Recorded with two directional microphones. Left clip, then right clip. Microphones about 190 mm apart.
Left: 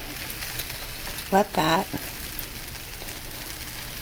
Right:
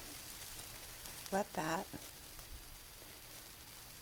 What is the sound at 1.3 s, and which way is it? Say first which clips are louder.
Speech: left 17 dB; 15° right (ahead or behind).